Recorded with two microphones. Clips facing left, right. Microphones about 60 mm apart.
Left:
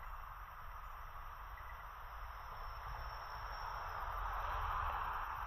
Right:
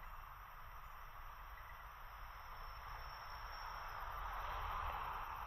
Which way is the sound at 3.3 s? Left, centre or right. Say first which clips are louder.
Left 4 dB; left.